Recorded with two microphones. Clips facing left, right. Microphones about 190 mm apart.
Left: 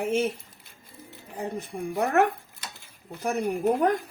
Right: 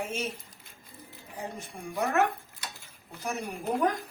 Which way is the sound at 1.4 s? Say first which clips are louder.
Left 7 dB; 60° left (ahead or behind).